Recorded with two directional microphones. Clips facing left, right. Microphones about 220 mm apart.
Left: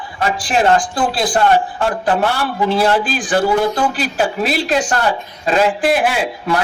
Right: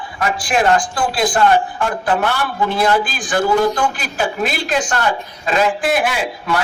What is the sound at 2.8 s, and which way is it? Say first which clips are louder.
A man's voice: right 1 dB; 30° left (ahead or behind).